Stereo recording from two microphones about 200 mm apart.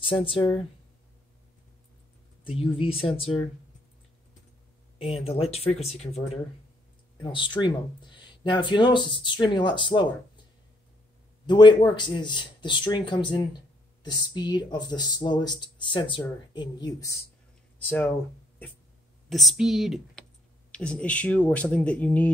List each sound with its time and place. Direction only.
0.0 s speech: 25° left (ahead or behind)
2.8 s speech: 30° left (ahead or behind)
4.9 s speech: 30° left (ahead or behind)
7.2 s speech: 25° left (ahead or behind)
11.4 s speech: 20° left (ahead or behind)
17.7 s speech: 10° left (ahead or behind)
19.2 s speech: centre (ahead or behind)